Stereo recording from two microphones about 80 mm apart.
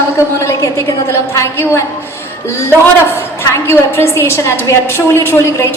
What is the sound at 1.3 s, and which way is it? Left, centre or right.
Speech, left.